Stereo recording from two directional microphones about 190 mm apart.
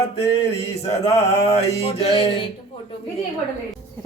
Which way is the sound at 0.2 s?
30° left (ahead or behind).